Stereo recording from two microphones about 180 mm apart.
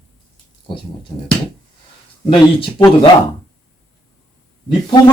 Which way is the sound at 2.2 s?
30° left (ahead or behind).